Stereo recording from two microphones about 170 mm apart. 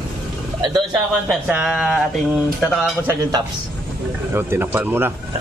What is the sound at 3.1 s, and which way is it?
Speech, 25° right (ahead or behind).